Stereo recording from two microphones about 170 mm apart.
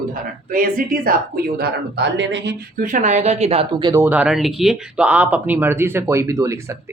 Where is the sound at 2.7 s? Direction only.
50° right (ahead or behind); by 4.0 s 25° right (ahead or behind).